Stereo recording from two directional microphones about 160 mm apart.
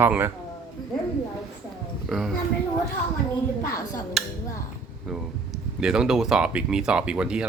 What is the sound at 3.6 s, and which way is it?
Speech, 25° left (ahead or behind).